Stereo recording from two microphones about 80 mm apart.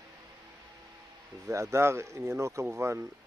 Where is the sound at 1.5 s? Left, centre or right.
Right.